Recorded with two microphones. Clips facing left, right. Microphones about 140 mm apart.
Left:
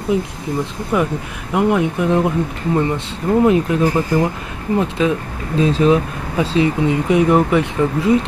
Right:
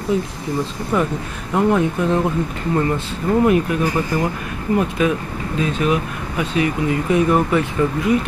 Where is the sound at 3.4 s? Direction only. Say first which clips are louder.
Left 3 dB; 25° left (ahead or behind).